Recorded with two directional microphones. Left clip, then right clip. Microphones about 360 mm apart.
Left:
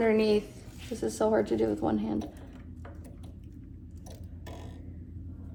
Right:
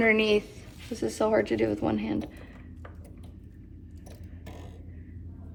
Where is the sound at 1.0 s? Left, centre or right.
Right.